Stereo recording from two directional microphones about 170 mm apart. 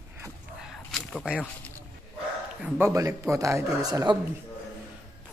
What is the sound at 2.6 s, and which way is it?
Speech, 15° right (ahead or behind).